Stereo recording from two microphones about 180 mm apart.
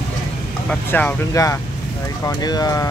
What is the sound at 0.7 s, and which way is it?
Speech, 10° left (ahead or behind).